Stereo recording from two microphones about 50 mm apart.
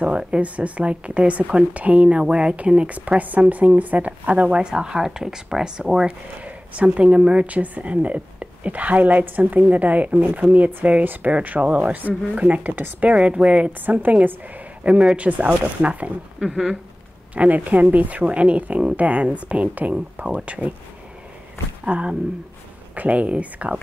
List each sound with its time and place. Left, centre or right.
0.0 s speech: right
6.4 s a woman's voice: right
13.1 s speech: right
15.1 s speech: right
16.3 s speech: centre
17.4 s a woman's voice: right
21.8 s speech: right